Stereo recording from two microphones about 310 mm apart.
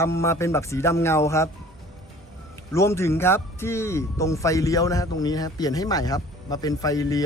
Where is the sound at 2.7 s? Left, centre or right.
Centre.